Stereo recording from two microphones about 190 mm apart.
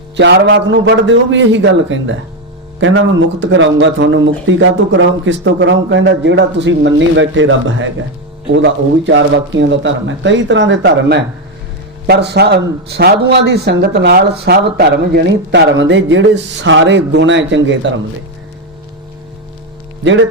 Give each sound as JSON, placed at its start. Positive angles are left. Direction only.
{"t": 0.2, "sound": "a man's voice", "side_deg": -70}
{"t": 8.5, "sound": "a man's voice", "side_deg": -75}